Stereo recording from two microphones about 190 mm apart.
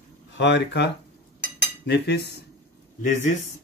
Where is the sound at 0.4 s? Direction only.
70° left (ahead or behind).